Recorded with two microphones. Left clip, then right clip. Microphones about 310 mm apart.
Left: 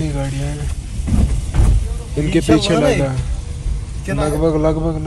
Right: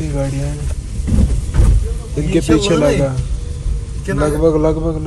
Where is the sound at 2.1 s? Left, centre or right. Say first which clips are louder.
Even; centre.